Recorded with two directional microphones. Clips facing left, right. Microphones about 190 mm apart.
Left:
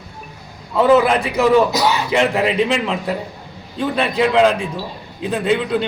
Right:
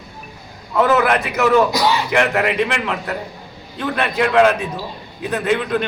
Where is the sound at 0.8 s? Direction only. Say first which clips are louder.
Left 3 dB; 25° left (ahead or behind).